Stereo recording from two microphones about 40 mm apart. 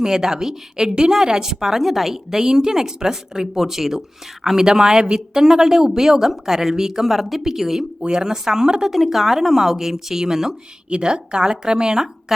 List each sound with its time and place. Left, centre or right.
0.0 s a woman's voice: centre
8.9 s a woman's voice: centre
10.8 s a woman's voice: right